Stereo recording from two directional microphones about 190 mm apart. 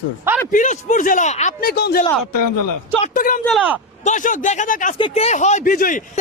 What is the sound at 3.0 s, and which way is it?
Speech, 45° left (ahead or behind).